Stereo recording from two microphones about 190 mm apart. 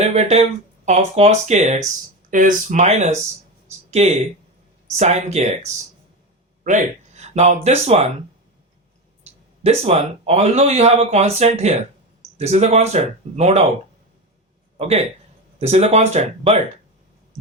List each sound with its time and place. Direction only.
0.0 s speech: 35° right (ahead or behind)
3.7 s a sound: 35° right (ahead or behind)
4.9 s speech: 35° right (ahead or behind)
9.6 s speech: 35° right (ahead or behind)
14.8 s speech: 35° right (ahead or behind)